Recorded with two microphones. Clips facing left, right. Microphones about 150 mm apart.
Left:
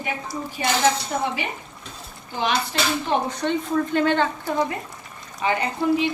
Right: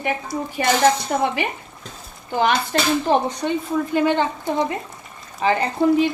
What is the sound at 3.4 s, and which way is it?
Speech, 10° right (ahead or behind).